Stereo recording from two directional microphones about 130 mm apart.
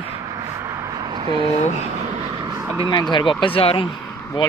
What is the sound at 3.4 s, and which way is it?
Speech, 45° left (ahead or behind).